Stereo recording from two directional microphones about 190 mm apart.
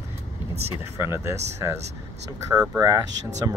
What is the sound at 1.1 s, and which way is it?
Speech, 15° right (ahead or behind).